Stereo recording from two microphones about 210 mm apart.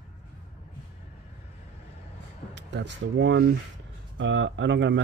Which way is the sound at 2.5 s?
55° right (ahead or behind).